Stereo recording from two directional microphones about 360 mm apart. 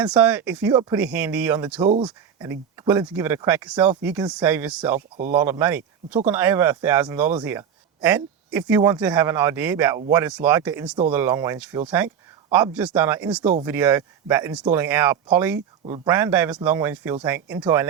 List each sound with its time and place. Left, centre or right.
0.0 s speech: centre
4.9 s speech: right
5.3 s speech: centre